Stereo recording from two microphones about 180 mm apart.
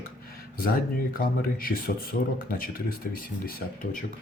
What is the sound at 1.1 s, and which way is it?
Speech, 50° left (ahead or behind).